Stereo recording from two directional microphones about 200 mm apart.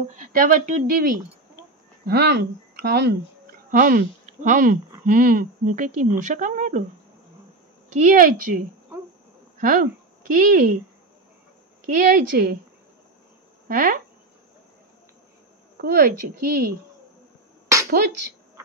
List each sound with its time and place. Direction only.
0.1 s speech: 40° right (ahead or behind)
2.0 s a woman's voice: 55° right (ahead or behind); by 6.8 s 40° right (ahead or behind)
7.9 s a woman's voice: 40° right (ahead or behind)
11.8 s a woman's voice: 45° right (ahead or behind)
13.7 s a woman's voice: 45° right (ahead or behind)
15.8 s a woman's voice: 50° right (ahead or behind)
17.8 s speech: 50° right (ahead or behind)